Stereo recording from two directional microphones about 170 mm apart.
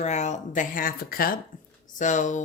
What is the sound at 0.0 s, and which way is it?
Speech, 45° left (ahead or behind).